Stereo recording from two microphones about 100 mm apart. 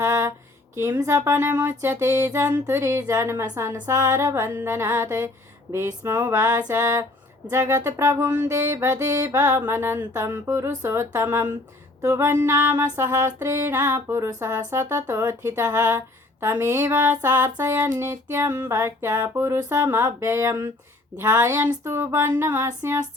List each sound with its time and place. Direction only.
0.0 s a sound: 25° right (ahead or behind)
1.0 s music: 25° right (ahead or behind)
12.0 s music: 30° right (ahead or behind)
12.3 s music: 20° right (ahead or behind)
16.9 s a sound: 15° right (ahead or behind)
17.2 s music: 25° right (ahead or behind)